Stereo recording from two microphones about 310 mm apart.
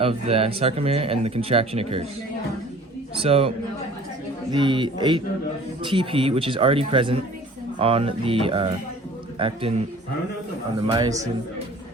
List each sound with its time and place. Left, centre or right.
0.0 s speech: centre
3.2 s speech: centre
4.5 s speech: centre
10.8 s speech: centre